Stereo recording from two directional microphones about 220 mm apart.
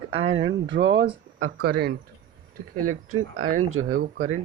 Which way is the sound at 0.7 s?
55° right (ahead or behind).